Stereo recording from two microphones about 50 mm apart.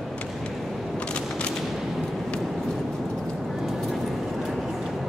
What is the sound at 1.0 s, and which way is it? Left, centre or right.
Gunshot, centre.